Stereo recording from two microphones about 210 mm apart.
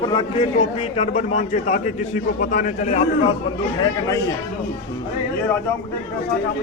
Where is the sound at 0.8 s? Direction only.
30° left (ahead or behind).